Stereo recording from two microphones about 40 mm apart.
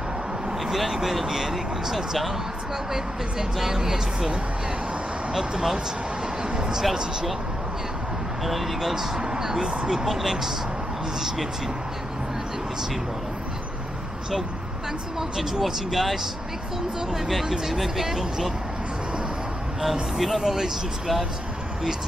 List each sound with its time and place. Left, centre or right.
0.7 s speech: centre
5.3 s speech: centre
6.5 s a sound: right
6.8 s speech: centre
8.5 s speech: centre
15.1 s speech: centre
19.8 s speech: centre